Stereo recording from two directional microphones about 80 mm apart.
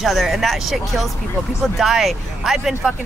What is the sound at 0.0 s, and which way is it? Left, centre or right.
Speech, centre.